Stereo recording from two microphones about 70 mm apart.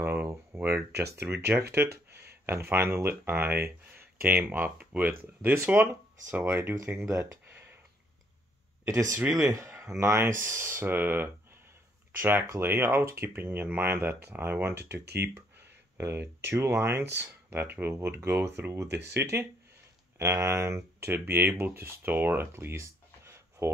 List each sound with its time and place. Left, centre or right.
0.0 s speech: right
1.8 s speech: right
9.3 s speech: right
16.0 s speech: right